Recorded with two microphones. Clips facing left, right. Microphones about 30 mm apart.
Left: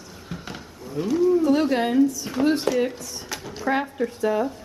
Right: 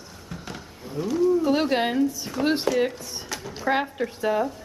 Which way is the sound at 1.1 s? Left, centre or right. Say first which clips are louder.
Left 2 dB; centre.